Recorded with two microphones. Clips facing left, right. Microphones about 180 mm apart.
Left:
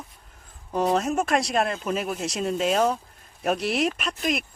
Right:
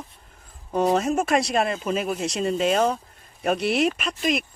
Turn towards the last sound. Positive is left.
turn(degrees=0)  # may be behind; listen again after turning